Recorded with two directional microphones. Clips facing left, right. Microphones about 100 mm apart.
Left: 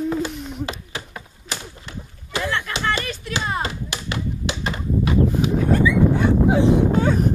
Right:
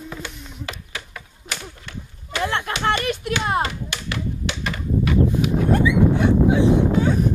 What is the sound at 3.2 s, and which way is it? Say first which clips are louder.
Clapping: right 1 dB; 60° right (ahead or behind).